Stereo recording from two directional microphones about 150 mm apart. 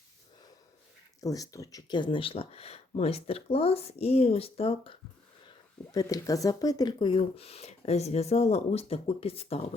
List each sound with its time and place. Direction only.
1.2 s speech: 25° left (ahead or behind)
5.9 s speech: 25° left (ahead or behind); by 9.6 s 40° left (ahead or behind)